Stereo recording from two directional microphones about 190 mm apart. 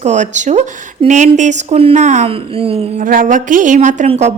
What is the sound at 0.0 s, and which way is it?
A woman's voice, 40° right (ahead or behind).